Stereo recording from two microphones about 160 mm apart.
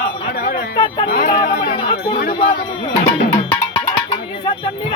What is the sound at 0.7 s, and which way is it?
Sheep, 30° left (ahead or behind).